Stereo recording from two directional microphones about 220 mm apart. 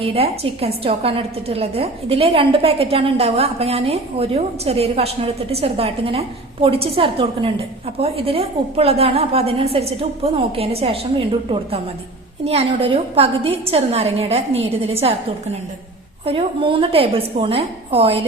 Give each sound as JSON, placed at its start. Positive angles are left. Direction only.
{"t": 0.0, "sound": "a woman's voice", "side_deg": -25}
{"t": 16.2, "sound": "a woman's voice", "side_deg": -25}